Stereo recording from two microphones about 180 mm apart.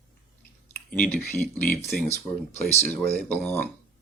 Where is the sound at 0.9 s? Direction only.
10° left (ahead or behind).